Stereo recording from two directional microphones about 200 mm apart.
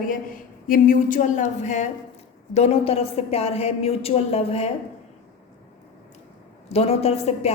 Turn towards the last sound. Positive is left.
turn(degrees=30)  # may be behind; listen again after turning